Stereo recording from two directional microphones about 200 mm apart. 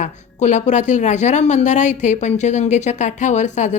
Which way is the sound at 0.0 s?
35° left (ahead or behind).